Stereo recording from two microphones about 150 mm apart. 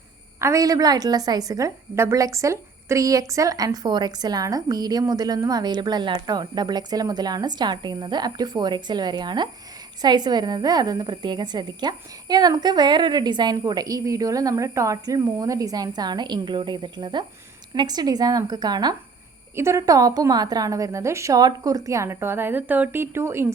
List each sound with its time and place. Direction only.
0.3 s a woman's voice: 20° right (ahead or behind)